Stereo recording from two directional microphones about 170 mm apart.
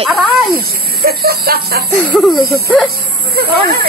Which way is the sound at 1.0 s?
65° right (ahead or behind).